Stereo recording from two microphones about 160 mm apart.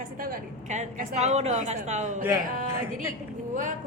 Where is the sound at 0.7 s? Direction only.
50° right (ahead or behind).